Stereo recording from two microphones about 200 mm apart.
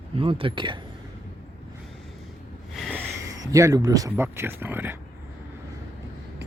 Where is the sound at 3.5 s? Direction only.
15° right (ahead or behind).